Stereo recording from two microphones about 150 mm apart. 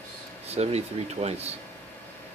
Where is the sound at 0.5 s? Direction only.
45° right (ahead or behind).